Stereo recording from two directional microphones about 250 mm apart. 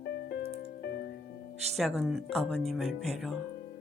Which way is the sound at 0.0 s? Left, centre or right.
Left.